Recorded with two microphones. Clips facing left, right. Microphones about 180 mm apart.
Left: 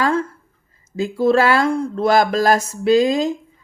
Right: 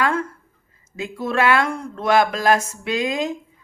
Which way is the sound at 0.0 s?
30° left (ahead or behind).